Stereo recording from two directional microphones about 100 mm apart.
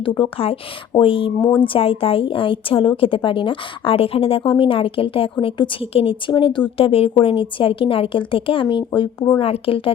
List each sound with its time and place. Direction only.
0.0 s a woman's voice: 50° left (ahead or behind)
1.0 s a woman's voice: 65° left (ahead or behind)
1.4 s speech: 15° left (ahead or behind)
1.6 s a woman's voice: 65° left (ahead or behind)
6.7 s a woman's voice: 70° left (ahead or behind)